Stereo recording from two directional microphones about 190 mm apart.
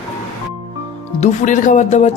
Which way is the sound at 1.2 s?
40° left (ahead or behind).